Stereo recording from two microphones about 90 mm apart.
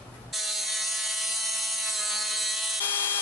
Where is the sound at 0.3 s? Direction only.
Centre (ahead or behind).